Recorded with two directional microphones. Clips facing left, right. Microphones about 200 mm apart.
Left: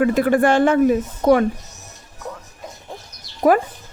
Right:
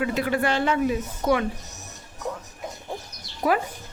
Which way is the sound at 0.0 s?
50° left (ahead or behind).